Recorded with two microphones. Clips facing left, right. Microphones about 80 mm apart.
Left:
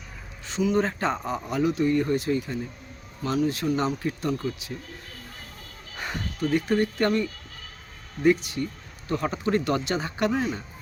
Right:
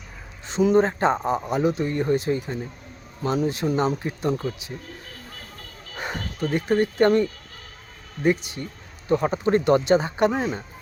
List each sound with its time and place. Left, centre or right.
0.6 s speech: right
6.0 s speech: right